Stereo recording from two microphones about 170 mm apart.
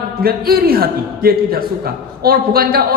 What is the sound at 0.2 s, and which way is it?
A woman's voice, 60° right (ahead or behind).